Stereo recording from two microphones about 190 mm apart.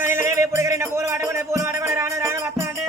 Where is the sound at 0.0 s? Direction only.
15° right (ahead or behind).